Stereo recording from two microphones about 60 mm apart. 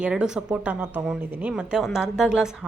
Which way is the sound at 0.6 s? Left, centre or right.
Right.